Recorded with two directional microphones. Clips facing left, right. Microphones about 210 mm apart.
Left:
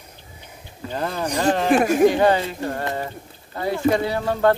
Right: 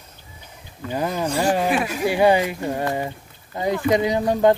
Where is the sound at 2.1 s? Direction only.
10° right (ahead or behind).